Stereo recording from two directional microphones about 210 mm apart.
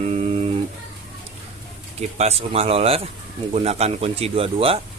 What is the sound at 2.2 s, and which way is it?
Speech, 30° right (ahead or behind).